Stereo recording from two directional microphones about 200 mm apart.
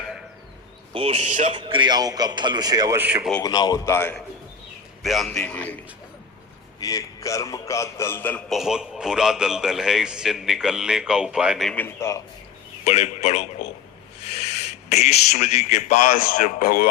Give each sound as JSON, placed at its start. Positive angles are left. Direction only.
{"t": 0.9, "sound": "a man's voice", "side_deg": -30}
{"t": 1.5, "sound": "a man's voice", "side_deg": -25}
{"t": 3.4, "sound": "a man's voice", "side_deg": 20}
{"t": 5.0, "sound": "a man's voice", "side_deg": 0}
{"t": 6.7, "sound": "a man's voice", "side_deg": 15}
{"t": 12.8, "sound": "a man's voice", "side_deg": 35}